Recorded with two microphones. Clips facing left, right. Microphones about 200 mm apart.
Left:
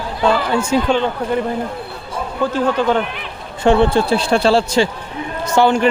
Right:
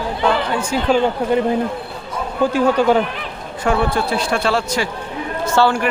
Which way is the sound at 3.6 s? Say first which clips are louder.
Left 5 dB; 25° left (ahead or behind).